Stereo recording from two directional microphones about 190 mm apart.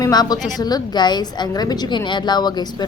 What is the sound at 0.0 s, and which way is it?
A woman's voice, 20° left (ahead or behind).